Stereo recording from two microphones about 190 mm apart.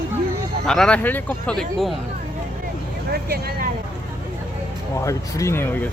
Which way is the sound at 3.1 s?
55° right (ahead or behind).